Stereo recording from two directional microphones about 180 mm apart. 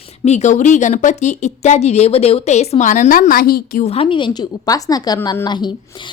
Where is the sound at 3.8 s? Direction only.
35° left (ahead or behind).